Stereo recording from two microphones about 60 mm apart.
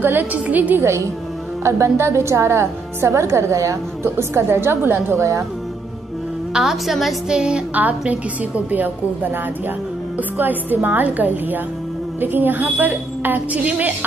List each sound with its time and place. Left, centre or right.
0.0 s a woman's voice: right
0.7 s a woman's voice: right
6.5 s a woman's voice: centre
7.3 s music: centre
8.1 s a woman's voice: right